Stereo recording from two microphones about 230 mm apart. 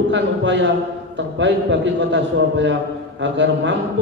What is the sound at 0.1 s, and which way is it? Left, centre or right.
A man's voice, right.